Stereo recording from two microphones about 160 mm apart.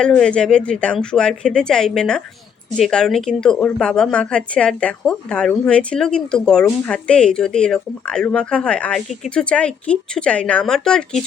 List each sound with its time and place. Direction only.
0.0 s a woman's voice: 5° left (ahead or behind)